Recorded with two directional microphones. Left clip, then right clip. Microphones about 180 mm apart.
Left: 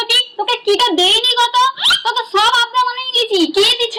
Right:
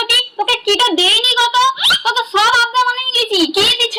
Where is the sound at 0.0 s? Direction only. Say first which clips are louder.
Right 1 dB; 20° left (ahead or behind).